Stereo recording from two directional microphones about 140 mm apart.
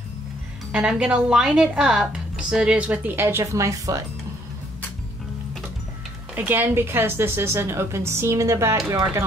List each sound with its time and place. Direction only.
0.7 s speech: 5° right (ahead or behind); by 4.0 s 25° right (ahead or behind)
6.3 s a woman's voice: 10° right (ahead or behind)